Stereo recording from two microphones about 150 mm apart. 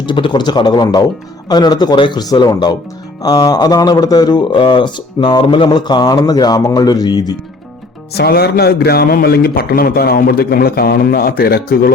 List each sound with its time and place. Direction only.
0.0 s a man's voice: 30° left (ahead or behind)
8.1 s a man's voice: 90° left